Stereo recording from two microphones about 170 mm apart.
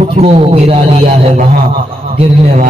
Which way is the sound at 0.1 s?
35° right (ahead or behind).